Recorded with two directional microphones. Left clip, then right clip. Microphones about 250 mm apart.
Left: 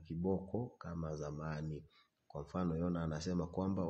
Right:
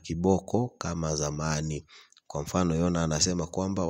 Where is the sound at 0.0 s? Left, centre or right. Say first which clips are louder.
Right 13 dB; right.